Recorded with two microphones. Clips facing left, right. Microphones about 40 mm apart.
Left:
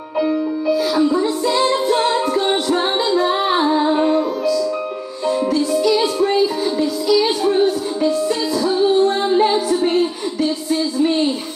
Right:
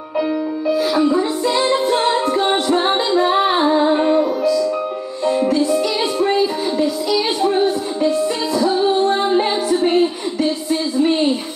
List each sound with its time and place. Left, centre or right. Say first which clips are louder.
0.7 s music: right 1 dB; centre